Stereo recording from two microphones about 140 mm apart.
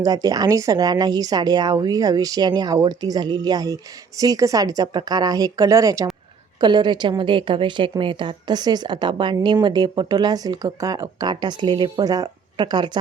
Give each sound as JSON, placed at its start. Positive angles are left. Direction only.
{"t": 0.0, "sound": "a woman's voice", "side_deg": -25}